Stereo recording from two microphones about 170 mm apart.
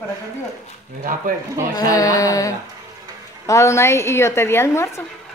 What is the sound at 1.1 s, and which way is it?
Speech, 55° right (ahead or behind).